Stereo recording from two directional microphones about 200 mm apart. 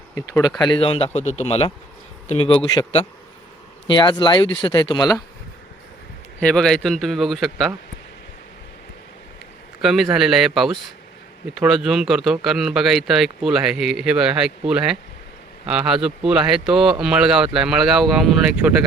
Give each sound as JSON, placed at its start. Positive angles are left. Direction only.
{"t": 0.1, "sound": "speech", "side_deg": 10}
{"t": 0.6, "sound": "speech", "side_deg": 25}
{"t": 6.4, "sound": "speech", "side_deg": 5}
{"t": 9.8, "sound": "speech", "side_deg": 0}